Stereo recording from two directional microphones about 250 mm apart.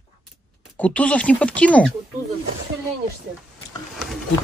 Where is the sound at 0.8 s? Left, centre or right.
Centre.